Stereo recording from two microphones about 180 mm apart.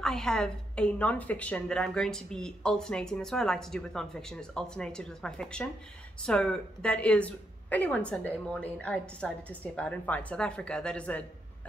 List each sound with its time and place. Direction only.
0.0 s a woman's voice: 5° left (ahead or behind)